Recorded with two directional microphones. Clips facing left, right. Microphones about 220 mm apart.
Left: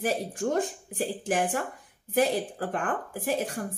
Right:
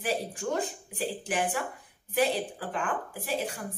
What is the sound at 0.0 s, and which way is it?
A woman's voice, 45° left (ahead or behind).